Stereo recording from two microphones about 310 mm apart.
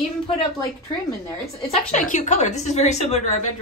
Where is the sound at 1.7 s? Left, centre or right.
Left.